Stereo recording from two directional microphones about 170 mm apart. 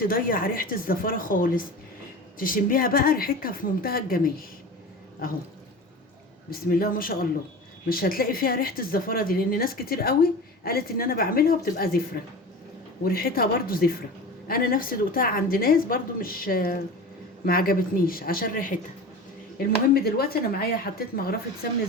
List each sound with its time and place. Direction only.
0.0 s speech: 55° left (ahead or behind)
6.5 s speech: 60° left (ahead or behind)
19.5 s speech: 65° left (ahead or behind)